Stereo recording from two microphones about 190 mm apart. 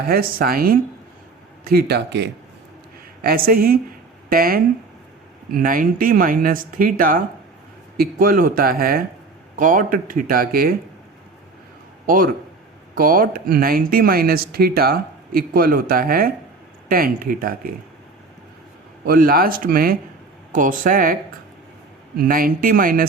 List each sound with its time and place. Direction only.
0.1 s speech: 50° right (ahead or behind)
12.0 s speech: 45° right (ahead or behind)
19.0 s speech: 50° right (ahead or behind)
22.2 s speech: 50° right (ahead or behind)